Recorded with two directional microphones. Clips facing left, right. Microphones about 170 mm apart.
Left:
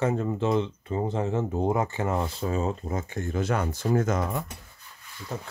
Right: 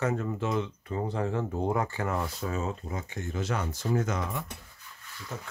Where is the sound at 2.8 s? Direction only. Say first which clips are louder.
Left 5 dB; 45° left (ahead or behind).